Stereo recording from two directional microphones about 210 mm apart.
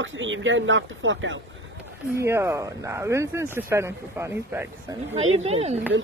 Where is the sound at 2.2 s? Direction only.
15° right (ahead or behind).